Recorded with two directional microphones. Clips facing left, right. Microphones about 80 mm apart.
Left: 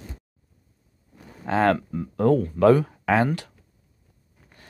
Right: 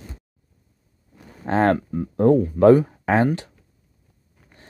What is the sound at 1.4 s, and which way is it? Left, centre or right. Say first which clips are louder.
Speech: right 2 dB; right.